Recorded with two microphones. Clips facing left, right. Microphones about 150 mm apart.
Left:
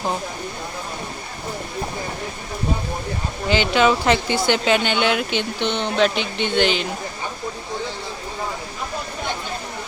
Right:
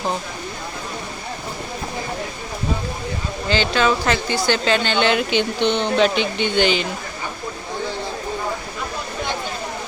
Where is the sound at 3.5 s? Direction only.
15° left (ahead or behind); by 6.8 s centre (ahead or behind).